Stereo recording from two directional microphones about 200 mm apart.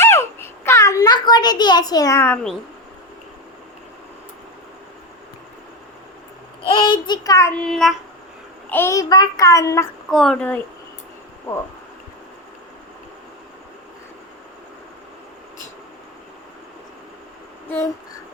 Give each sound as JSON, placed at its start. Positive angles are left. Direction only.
{"t": 0.0, "sound": "a sound", "side_deg": 10}
{"t": 6.7, "sound": "child singing", "side_deg": 25}
{"t": 7.6, "sound": "a woman's voice", "side_deg": 0}
{"t": 8.7, "sound": "child singing", "side_deg": 15}
{"t": 10.1, "sound": "a woman's voice", "side_deg": 5}